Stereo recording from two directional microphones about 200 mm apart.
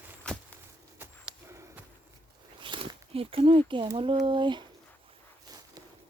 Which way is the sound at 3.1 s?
30° right (ahead or behind).